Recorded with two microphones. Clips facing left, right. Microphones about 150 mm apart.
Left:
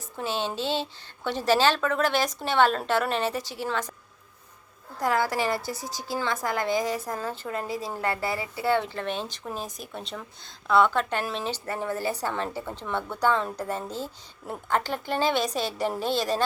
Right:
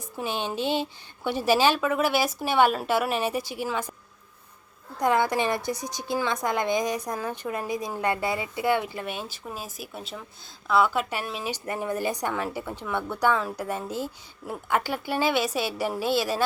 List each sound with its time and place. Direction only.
0.2 s a woman's voice: 15° right (ahead or behind)
4.9 s a woman's voice: 20° right (ahead or behind)